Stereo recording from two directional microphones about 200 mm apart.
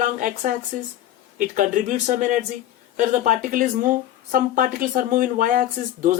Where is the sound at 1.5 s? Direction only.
40° right (ahead or behind).